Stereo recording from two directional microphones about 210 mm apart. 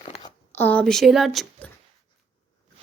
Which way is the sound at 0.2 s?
10° left (ahead or behind).